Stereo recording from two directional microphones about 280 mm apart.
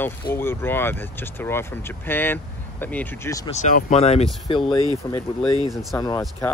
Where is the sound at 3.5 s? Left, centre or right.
Left.